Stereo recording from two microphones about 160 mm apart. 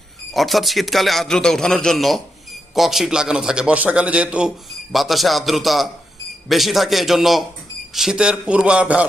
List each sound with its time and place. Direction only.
0.3 s a man's voice: centre (ahead or behind)